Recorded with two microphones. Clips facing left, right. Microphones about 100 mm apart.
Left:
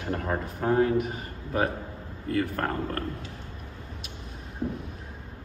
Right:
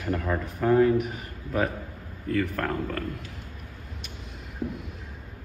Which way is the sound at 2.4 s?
45° left (ahead or behind).